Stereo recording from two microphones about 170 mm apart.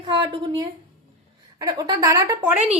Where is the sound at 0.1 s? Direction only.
25° right (ahead or behind).